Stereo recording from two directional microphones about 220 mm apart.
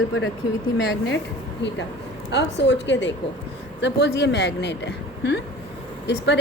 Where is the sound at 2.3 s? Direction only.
55° left (ahead or behind).